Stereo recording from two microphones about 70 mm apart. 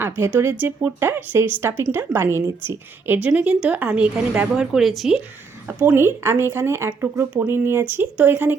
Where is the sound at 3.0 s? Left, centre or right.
Right.